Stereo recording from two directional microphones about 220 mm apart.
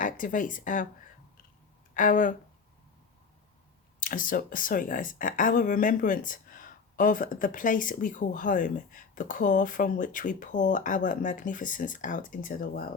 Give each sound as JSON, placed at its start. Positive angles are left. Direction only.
{"t": 0.0, "sound": "speech", "side_deg": 40}
{"t": 2.0, "sound": "speech", "side_deg": 35}
{"t": 4.0, "sound": "speech", "side_deg": 40}